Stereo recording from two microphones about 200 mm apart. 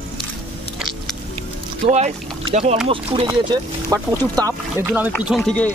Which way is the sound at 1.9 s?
35° right (ahead or behind).